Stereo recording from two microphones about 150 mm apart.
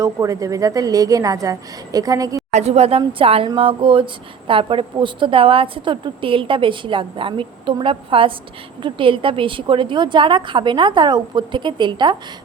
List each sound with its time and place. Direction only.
0.0 s a woman's voice: 20° right (ahead or behind)
2.5 s a woman's voice: 45° right (ahead or behind); by 12.1 s 30° right (ahead or behind)